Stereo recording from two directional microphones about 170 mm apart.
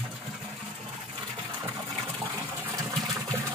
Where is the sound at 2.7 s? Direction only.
20° right (ahead or behind).